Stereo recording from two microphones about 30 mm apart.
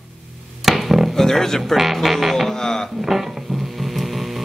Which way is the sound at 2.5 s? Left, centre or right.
Centre.